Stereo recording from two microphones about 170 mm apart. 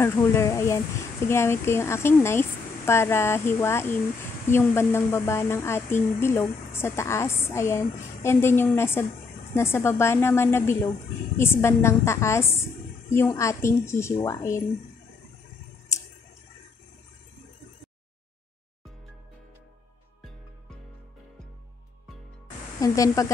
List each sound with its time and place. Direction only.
0.0 s a woman's voice: 15° left (ahead or behind)
22.8 s speech: 20° left (ahead or behind)